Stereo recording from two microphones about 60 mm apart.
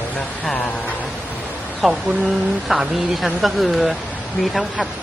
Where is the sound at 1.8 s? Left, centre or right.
Centre.